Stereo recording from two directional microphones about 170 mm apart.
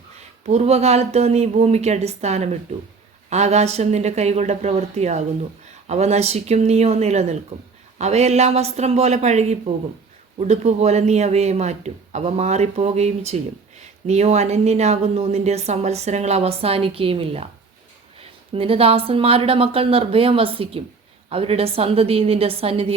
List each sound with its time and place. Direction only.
0.4 s a man's voice: 40° right (ahead or behind)